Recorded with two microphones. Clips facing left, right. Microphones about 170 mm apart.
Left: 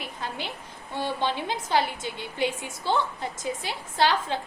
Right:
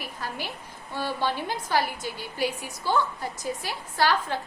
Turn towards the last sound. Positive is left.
turn(degrees=20)  # may be behind; listen again after turning